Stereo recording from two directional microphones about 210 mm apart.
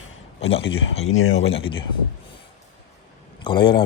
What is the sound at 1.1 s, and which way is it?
Speech, 75° left (ahead or behind).